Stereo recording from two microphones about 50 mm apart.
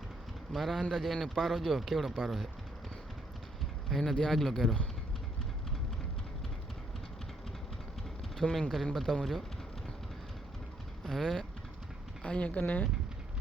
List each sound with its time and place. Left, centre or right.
0.5 s a man's voice: centre
3.8 s speech: centre
8.4 s a man's voice: centre
11.0 s speech: centre
12.2 s speech: left